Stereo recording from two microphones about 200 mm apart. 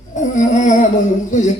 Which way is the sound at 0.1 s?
40° left (ahead or behind).